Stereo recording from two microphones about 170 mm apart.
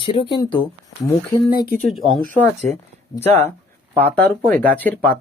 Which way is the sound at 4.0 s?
10° left (ahead or behind).